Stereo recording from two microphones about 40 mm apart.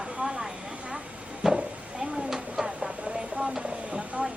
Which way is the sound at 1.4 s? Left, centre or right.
Centre.